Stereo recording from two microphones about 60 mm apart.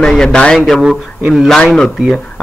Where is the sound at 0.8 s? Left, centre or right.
Centre.